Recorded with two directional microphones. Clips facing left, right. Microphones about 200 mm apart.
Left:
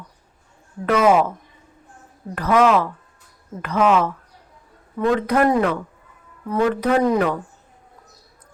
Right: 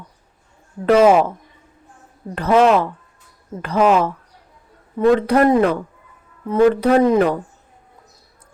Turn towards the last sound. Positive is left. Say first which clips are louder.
# right 4 dB
turn(degrees=-30)  # may be behind; listen again after turning